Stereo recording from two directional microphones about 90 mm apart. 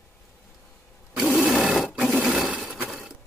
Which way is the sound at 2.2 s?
5° right (ahead or behind).